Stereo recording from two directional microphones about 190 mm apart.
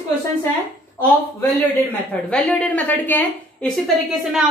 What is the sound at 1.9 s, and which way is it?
Speech, 5° left (ahead or behind).